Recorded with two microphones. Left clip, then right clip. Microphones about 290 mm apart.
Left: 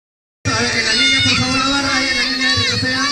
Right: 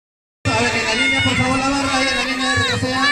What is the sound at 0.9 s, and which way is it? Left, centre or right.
Cat, right.